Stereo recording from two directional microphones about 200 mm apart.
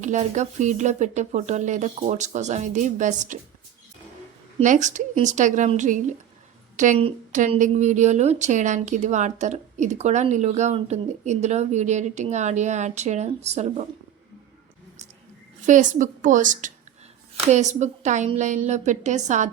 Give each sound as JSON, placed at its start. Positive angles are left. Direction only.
{"t": 0.0, "sound": "a woman's voice", "side_deg": -35}
{"t": 4.6, "sound": "a woman's voice", "side_deg": -40}
{"t": 15.6, "sound": "a woman's voice", "side_deg": -40}